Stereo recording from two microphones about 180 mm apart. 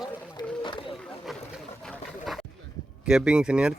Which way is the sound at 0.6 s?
30° left (ahead or behind).